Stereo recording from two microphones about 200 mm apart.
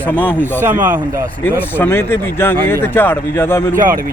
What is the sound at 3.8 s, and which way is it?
Speech, 45° right (ahead or behind).